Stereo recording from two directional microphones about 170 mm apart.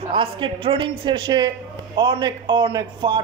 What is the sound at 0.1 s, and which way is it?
Speech, 30° right (ahead or behind).